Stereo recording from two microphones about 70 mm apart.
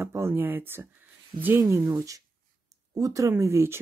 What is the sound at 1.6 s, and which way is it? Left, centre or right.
Speech, right.